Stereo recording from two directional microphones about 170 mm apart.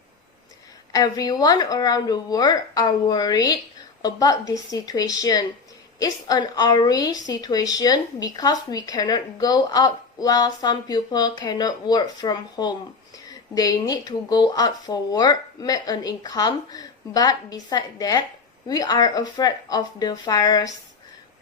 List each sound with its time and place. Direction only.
0.9 s a woman's voice: 25° left (ahead or behind)